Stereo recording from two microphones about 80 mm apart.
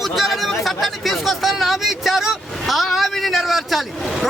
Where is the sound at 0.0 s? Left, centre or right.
Centre.